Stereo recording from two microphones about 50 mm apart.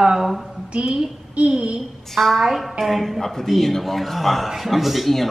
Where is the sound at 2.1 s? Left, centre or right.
Centre.